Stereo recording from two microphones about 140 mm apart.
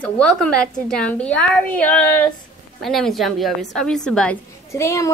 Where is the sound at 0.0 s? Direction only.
5° left (ahead or behind).